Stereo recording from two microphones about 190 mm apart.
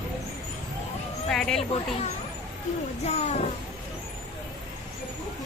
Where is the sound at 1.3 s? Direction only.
Centre (ahead or behind).